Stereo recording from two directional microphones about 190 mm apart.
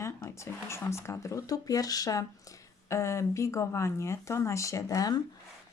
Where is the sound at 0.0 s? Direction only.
15° left (ahead or behind).